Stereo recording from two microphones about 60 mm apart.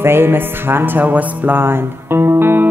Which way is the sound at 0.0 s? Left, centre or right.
Right.